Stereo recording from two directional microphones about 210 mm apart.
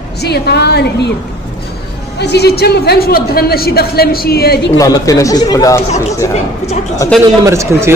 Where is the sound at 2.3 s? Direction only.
50° left (ahead or behind).